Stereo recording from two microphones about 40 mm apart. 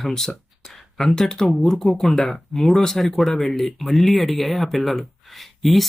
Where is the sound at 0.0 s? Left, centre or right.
Centre.